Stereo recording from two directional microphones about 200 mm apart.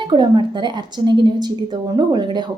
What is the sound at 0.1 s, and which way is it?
A woman's voice, 20° right (ahead or behind).